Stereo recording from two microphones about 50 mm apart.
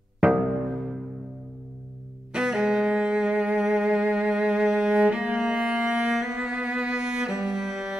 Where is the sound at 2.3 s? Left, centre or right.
Centre.